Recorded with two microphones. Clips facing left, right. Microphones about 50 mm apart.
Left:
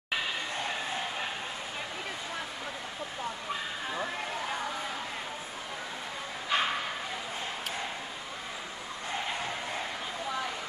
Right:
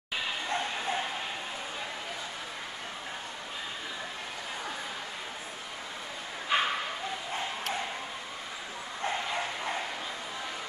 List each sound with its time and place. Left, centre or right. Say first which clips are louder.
6.5 s bow-wow: right 1 dB; centre